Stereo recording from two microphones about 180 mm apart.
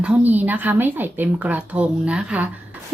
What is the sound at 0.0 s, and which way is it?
A woman's voice, 5° right (ahead or behind).